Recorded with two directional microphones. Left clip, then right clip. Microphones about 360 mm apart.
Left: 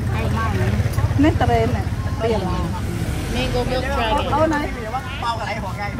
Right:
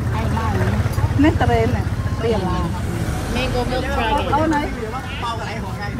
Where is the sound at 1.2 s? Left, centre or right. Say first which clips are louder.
Right 1 dB; centre.